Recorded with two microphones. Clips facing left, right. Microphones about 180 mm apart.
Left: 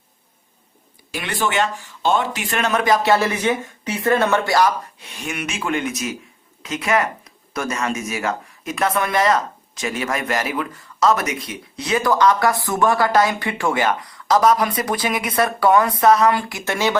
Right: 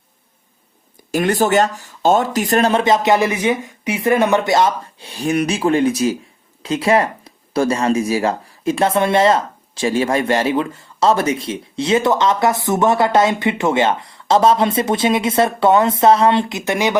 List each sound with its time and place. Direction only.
1.1 s speech: 45° right (ahead or behind); by 17.0 s 15° right (ahead or behind)